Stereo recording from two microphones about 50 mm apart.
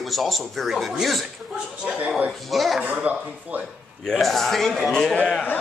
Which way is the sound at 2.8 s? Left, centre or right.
Right.